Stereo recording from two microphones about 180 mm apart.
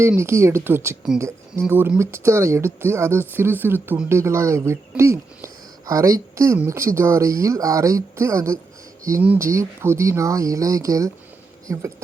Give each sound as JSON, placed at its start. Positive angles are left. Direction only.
{"t": 0.0, "sound": "speech", "side_deg": -15}